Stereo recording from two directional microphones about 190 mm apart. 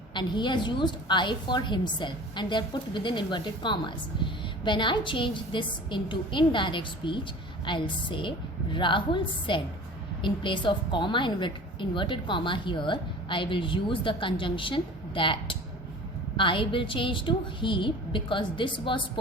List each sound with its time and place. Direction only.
0.1 s a woman's voice: 25° left (ahead or behind)